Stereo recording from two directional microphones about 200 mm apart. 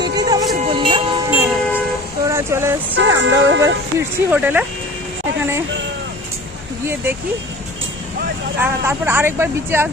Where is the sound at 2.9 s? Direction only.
65° right (ahead or behind).